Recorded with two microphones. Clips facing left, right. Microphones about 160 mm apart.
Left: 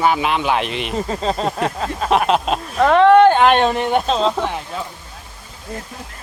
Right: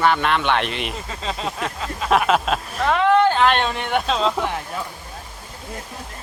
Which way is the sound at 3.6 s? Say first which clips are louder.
Left 6 dB; 35° left (ahead or behind).